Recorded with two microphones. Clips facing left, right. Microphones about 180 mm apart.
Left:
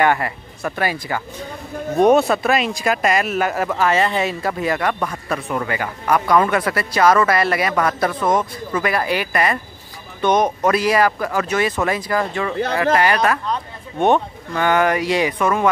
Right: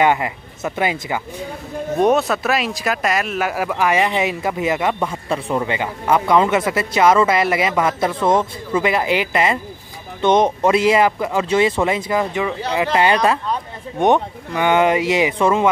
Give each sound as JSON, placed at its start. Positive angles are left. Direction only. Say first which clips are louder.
{"t": 0.0, "sound": "speech", "louder": "right 1 dB", "side_deg": -20}
{"t": 2.0, "sound": "speech", "louder": "left 3 dB", "side_deg": 0}
{"t": 13.5, "sound": "speech", "louder": "right 1 dB", "side_deg": -15}